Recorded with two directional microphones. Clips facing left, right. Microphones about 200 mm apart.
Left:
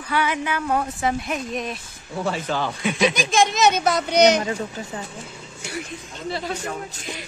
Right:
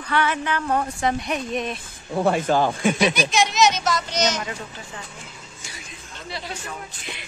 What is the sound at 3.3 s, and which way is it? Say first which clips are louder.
A woman's voice: left 3 dB; 50° left (ahead or behind).